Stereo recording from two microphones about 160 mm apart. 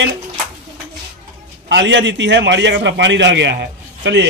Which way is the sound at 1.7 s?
90° right.